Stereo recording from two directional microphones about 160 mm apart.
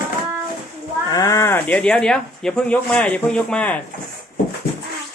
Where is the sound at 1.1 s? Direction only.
20° left (ahead or behind).